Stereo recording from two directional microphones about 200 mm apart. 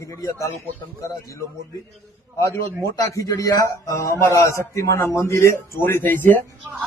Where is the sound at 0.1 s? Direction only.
15° left (ahead or behind).